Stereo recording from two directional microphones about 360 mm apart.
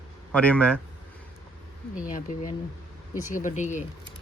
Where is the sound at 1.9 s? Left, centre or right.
Left.